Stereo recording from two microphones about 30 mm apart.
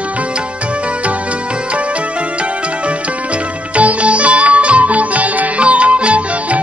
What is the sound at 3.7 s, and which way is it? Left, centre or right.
Music, right.